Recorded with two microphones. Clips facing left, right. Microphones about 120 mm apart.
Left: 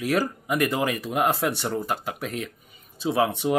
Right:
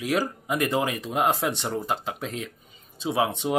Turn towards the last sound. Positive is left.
turn(degrees=-20)  # may be behind; listen again after turning